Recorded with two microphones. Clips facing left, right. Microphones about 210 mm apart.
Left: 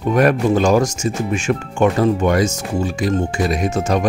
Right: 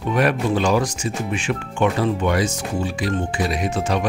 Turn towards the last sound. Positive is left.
turn(degrees=45)  # may be behind; listen again after turning